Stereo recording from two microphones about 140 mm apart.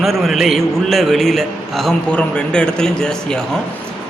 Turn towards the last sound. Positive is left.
turn(degrees=5)  # may be behind; listen again after turning